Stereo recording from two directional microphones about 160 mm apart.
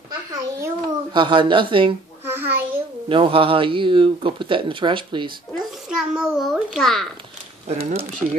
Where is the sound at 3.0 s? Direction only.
35° right (ahead or behind).